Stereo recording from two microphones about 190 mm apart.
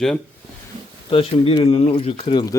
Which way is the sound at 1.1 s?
30° left (ahead or behind).